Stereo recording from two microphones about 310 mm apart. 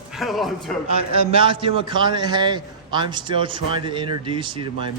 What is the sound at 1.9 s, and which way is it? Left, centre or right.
A man's voice, centre.